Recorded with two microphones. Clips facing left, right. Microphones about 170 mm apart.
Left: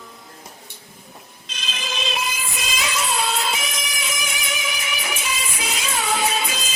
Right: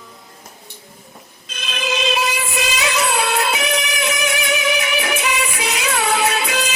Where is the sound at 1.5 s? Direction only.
60° right (ahead or behind).